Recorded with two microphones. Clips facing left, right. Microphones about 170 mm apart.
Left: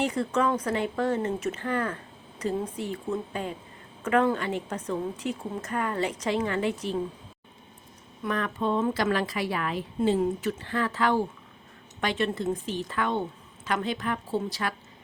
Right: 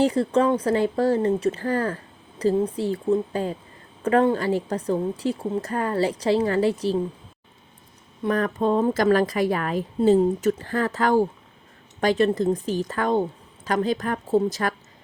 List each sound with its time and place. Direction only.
0.0 s a woman's voice: 30° right (ahead or behind)
8.2 s a woman's voice: 40° right (ahead or behind)